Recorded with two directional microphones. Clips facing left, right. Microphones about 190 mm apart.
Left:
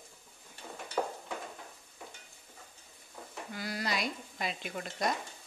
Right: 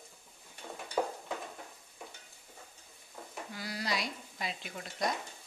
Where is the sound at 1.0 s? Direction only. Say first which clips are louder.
Right 1 dB; 10° right (ahead or behind).